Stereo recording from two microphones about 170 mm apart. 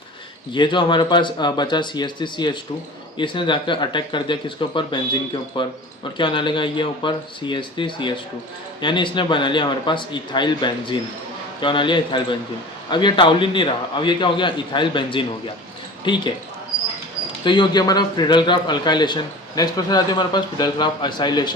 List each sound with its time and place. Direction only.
0.5 s a man's voice: 30° left (ahead or behind)
17.4 s a man's voice: 25° left (ahead or behind)